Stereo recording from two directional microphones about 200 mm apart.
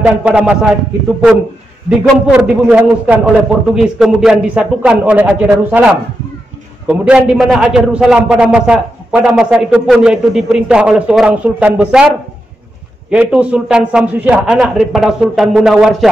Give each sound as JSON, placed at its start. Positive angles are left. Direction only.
{"t": 0.0, "sound": "a man's voice", "side_deg": -5}
{"t": 1.9, "sound": "a man's voice", "side_deg": -5}
{"t": 6.9, "sound": "a man's voice", "side_deg": -5}
{"t": 13.1, "sound": "a man's voice", "side_deg": -5}